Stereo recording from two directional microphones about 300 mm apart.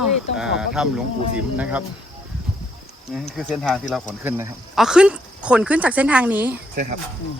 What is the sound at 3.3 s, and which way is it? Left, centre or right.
Speech, centre.